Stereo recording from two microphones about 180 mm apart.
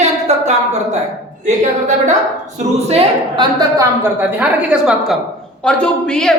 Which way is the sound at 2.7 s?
35° right (ahead or behind).